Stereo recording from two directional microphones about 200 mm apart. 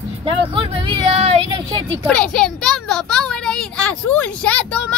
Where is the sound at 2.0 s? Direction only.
5° left (ahead or behind).